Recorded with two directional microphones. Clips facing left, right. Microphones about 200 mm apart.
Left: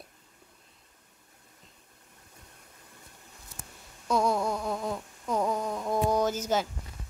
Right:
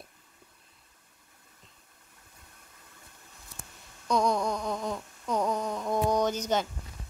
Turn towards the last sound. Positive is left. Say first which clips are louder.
# even
turn(degrees=5)  # may be behind; listen again after turning